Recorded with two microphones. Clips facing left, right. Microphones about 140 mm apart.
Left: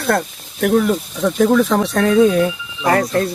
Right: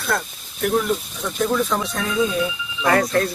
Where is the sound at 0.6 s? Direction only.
85° left.